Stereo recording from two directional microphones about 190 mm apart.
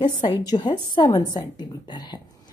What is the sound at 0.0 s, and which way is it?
A woman's voice, 25° left (ahead or behind).